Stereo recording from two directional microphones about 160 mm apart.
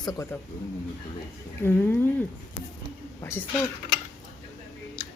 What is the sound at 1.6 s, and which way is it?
Speech, 10° left (ahead or behind).